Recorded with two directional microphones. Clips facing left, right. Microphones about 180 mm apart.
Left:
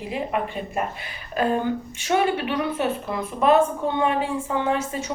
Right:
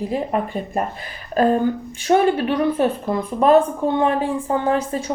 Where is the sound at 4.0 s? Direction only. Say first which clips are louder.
Right 2 dB; 40° right (ahead or behind).